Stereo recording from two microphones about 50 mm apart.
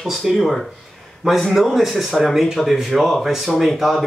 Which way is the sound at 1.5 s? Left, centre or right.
Centre.